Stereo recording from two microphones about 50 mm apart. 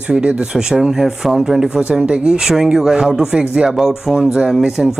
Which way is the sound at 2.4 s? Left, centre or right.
Centre.